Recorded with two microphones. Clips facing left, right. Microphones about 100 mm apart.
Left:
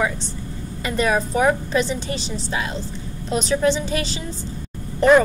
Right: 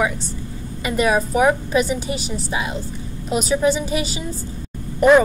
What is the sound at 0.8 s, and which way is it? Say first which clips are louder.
A woman's voice: right 2 dB; 10° right (ahead or behind).